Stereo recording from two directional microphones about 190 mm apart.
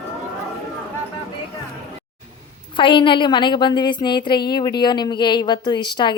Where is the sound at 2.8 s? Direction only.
25° left (ahead or behind).